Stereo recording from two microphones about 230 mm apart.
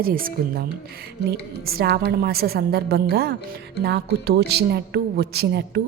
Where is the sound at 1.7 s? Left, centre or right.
Right.